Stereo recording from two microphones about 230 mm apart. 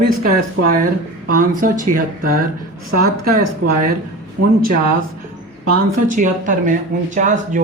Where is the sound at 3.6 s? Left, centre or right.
Right.